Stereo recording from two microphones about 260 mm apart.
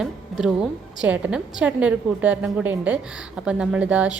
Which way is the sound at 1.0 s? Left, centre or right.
Centre.